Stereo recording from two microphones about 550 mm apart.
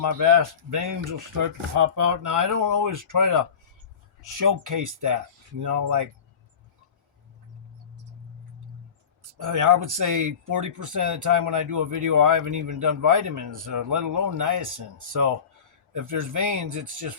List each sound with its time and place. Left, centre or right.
0.2 s speech: right
9.4 s speech: right